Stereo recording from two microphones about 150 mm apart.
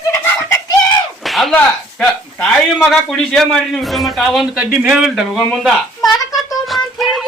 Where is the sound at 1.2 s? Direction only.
Centre (ahead or behind).